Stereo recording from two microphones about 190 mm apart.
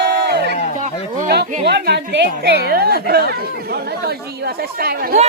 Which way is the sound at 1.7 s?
60° right (ahead or behind).